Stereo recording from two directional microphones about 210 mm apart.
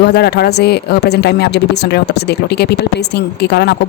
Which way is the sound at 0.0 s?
50° left (ahead or behind).